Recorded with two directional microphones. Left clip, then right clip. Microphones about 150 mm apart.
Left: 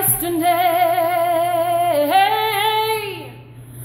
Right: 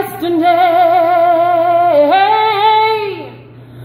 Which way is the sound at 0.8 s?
Centre (ahead or behind).